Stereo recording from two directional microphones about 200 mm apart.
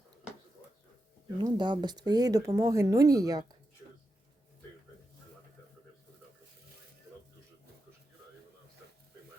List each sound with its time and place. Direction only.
1.4 s speech: 20° right (ahead or behind)